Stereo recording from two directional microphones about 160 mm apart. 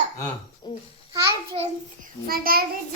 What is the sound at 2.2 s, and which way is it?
Child singing, 70° right (ahead or behind).